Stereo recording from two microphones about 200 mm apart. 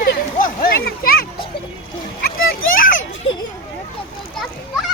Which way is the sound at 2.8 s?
40° left (ahead or behind).